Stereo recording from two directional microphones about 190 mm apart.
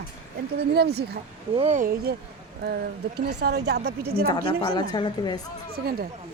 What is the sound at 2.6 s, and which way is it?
Speech, 60° right (ahead or behind).